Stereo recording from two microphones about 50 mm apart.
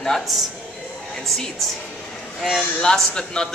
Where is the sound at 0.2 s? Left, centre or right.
Centre.